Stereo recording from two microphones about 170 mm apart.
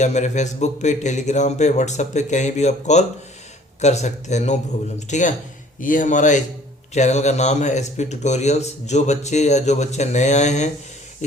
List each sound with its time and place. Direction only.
0.0 s speech: 45° left (ahead or behind)